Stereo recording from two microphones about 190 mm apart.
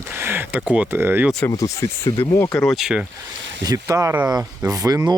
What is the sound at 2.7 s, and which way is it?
Speech, centre (ahead or behind).